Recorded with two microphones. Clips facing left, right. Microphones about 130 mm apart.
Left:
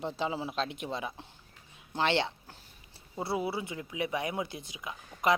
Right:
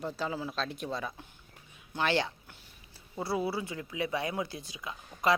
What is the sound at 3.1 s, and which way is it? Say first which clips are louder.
Speech: even; 20° left (ahead or behind).